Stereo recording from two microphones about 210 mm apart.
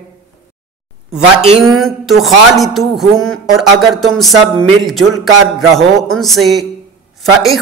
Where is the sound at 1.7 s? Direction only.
Centre (ahead or behind).